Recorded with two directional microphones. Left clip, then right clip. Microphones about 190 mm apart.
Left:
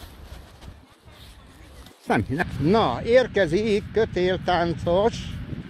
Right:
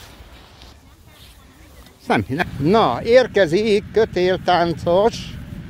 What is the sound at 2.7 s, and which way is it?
Speech, 35° right (ahead or behind).